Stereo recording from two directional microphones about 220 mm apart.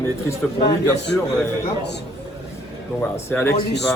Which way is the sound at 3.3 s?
10° left (ahead or behind).